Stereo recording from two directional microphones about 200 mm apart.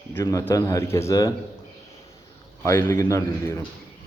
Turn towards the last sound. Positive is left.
turn(degrees=15)  # may be behind; listen again after turning